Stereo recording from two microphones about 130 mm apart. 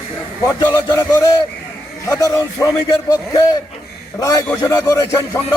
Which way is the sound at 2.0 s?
25° left (ahead or behind).